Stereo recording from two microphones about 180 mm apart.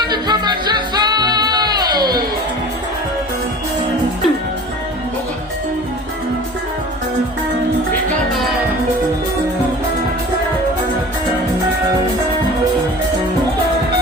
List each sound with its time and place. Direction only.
0.1 s music: 25° right (ahead or behind)
8.3 s music: centre (ahead or behind)